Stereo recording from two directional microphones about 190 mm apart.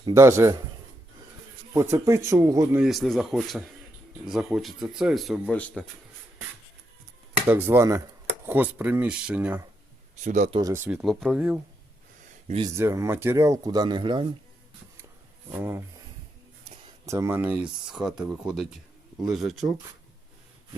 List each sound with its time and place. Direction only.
0.1 s speech: 15° right (ahead or behind)
1.7 s speech: 15° right (ahead or behind)
2.8 s speech: centre (ahead or behind)
7.4 s speech: 10° right (ahead or behind)
10.2 s speech: 40° right (ahead or behind)
10.6 s speech: 15° right (ahead or behind)
10.8 s speech: centre (ahead or behind)
12.6 s speech: 15° right (ahead or behind)
15.5 s speech: 10° right (ahead or behind)
16.6 s a sound: 20° right (ahead or behind)
17.8 s speech: 5° right (ahead or behind)